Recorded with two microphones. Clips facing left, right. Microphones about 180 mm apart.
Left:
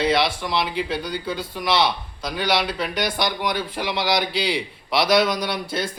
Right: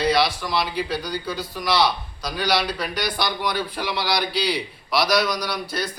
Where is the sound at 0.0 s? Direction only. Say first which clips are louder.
Even; 20° left (ahead or behind).